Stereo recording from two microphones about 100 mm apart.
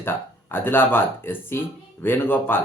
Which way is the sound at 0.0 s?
25° left (ahead or behind).